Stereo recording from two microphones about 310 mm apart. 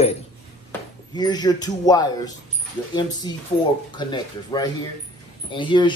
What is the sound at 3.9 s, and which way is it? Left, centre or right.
Speech, centre.